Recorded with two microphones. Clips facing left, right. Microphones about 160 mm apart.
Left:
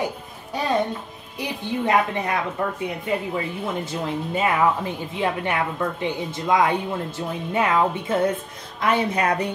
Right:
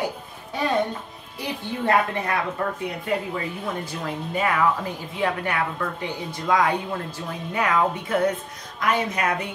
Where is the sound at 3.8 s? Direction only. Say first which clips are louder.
Left 3 dB; 25° left (ahead or behind).